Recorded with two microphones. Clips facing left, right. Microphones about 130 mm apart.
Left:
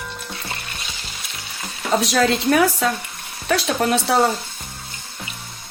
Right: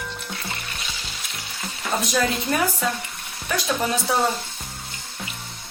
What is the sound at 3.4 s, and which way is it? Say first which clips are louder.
Speech: left 4 dB; 75° left (ahead or behind).